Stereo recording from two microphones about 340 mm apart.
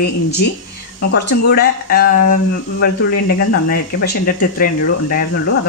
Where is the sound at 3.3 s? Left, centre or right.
Left.